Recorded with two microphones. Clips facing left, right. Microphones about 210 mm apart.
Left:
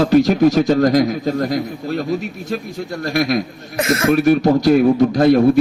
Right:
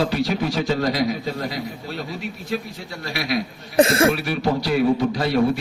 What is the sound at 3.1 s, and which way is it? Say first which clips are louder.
Speech: left 7 dB; 45° left (ahead or behind).